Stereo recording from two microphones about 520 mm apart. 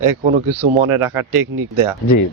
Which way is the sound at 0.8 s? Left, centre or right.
Right.